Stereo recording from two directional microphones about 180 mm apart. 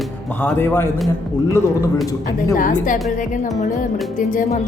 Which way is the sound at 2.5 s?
45° left (ahead or behind).